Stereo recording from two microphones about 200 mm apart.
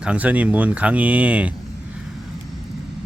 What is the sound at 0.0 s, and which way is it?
Speech, 5° right (ahead or behind).